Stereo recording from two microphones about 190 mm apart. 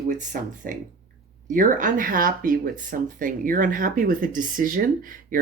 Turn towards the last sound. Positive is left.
turn(degrees=-45)  # may be behind; listen again after turning